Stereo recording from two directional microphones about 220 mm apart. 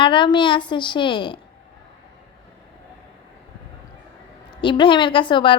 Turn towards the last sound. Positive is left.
turn(degrees=20)  # may be behind; listen again after turning